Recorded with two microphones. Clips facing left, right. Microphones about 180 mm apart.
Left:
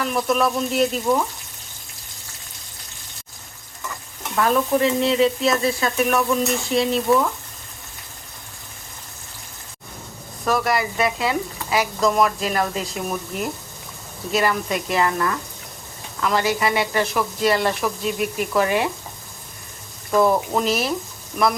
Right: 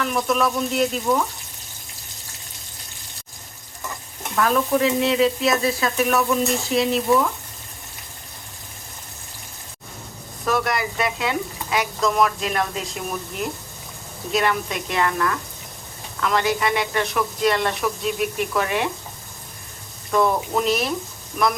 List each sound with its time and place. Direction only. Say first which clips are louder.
0.0 s speech: left 1 dB; centre (ahead or behind)
4.4 s speech: left 1 dB; 5° left (ahead or behind)
10.4 s speech: left 2 dB; centre (ahead or behind)
20.1 s speech: left 2 dB; 5° left (ahead or behind)